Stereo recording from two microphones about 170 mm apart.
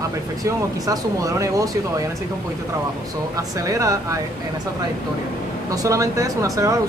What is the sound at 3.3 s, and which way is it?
Speech, 20° right (ahead or behind).